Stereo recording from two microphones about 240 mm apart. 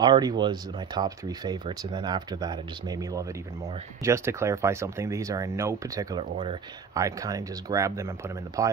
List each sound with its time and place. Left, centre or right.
0.0 s speech: centre